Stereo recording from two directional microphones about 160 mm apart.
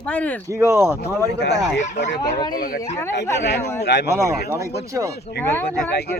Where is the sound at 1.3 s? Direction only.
90° left.